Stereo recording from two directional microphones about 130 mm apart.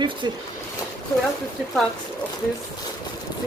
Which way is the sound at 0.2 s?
35° right (ahead or behind).